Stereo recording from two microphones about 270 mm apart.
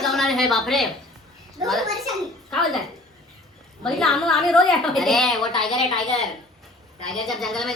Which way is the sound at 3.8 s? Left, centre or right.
Centre.